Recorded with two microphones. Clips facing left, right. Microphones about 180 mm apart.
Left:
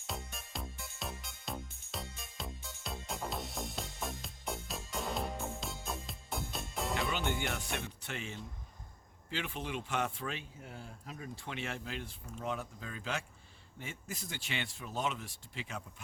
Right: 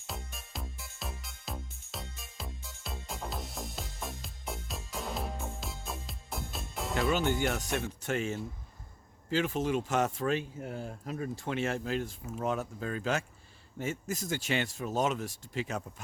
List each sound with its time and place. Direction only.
0.1 s music: centre (ahead or behind)
7.1 s speech: 40° right (ahead or behind)